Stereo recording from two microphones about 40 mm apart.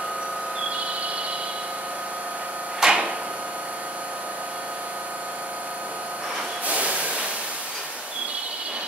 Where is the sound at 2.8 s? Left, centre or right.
Right.